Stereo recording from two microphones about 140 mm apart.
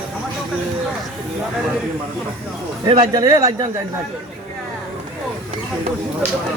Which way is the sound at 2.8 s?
30° right (ahead or behind).